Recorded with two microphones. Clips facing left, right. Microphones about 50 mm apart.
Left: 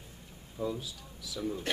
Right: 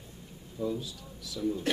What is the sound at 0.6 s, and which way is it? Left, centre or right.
Speech, left.